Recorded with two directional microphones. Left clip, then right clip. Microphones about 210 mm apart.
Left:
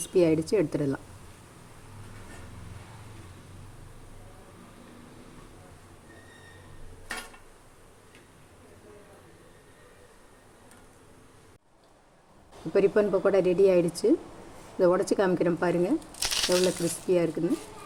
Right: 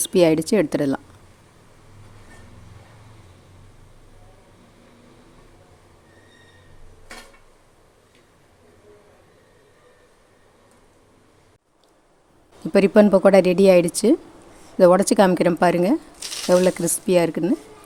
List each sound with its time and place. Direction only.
0.0 s speech: 50° right (ahead or behind)
12.7 s speech: 50° right (ahead or behind)